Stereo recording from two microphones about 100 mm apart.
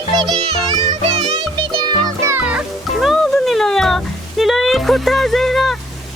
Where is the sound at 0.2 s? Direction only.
50° right (ahead or behind).